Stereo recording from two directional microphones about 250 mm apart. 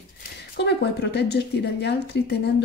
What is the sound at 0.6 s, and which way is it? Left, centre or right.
A woman's voice, left.